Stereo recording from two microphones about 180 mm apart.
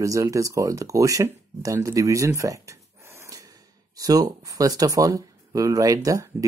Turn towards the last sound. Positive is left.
turn(degrees=-20)  # may be behind; listen again after turning